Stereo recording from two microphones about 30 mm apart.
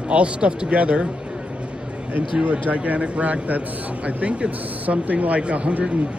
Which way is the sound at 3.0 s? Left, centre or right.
Right.